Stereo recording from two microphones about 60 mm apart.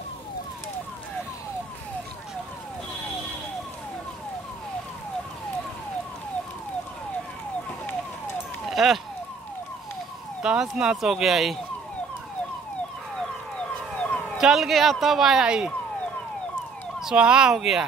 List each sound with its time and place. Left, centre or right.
8.6 s police car: centre
10.4 s speech: centre
13.6 s emergency vehicle: centre
14.4 s speech: centre
17.0 s speech: centre